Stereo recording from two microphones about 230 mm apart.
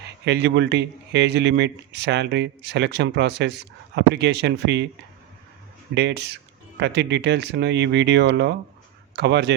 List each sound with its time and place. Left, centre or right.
0.3 s speech: right
5.9 s speech: right